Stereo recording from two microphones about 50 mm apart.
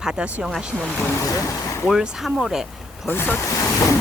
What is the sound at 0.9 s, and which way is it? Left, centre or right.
Speech, left.